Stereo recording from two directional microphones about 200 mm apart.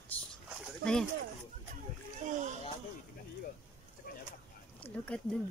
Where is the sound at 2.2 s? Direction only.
40° right (ahead or behind).